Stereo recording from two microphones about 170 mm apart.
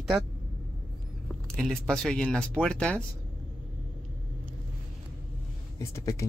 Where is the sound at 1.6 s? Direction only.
5° left (ahead or behind).